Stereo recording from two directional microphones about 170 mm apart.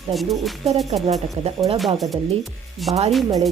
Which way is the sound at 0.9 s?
40° right (ahead or behind).